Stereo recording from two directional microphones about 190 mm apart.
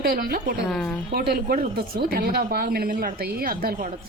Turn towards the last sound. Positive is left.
turn(degrees=-50)  # may be behind; listen again after turning